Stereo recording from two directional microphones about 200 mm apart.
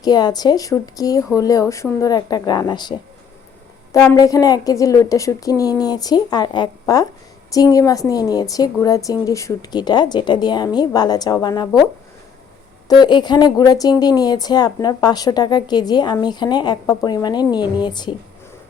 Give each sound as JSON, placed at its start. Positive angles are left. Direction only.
{"t": 0.0, "sound": "speech", "side_deg": 20}
{"t": 4.1, "sound": "a woman's voice", "side_deg": 20}
{"t": 12.9, "sound": "speech", "side_deg": 20}